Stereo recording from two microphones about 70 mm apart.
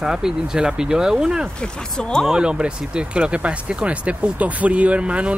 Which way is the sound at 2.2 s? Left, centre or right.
Centre.